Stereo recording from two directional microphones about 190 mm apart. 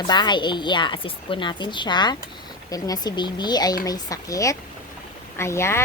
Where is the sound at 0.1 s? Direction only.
25° left (ahead or behind).